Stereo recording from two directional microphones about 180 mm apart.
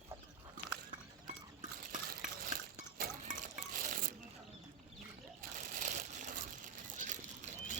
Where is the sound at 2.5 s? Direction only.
45° right (ahead or behind).